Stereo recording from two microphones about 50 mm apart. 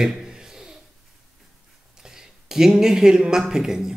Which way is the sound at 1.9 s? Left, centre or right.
Centre.